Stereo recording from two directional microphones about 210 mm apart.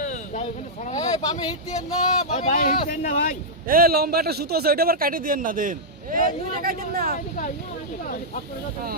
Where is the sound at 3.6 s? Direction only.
45° right (ahead or behind).